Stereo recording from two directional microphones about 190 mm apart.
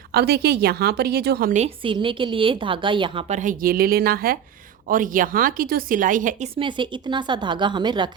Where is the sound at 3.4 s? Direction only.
45° right (ahead or behind).